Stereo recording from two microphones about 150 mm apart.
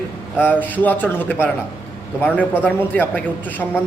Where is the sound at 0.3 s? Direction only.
15° left (ahead or behind).